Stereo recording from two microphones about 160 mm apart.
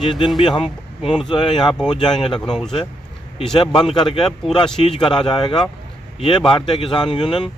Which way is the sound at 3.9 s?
30° left (ahead or behind).